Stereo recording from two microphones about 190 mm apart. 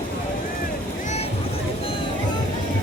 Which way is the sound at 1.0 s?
35° left (ahead or behind).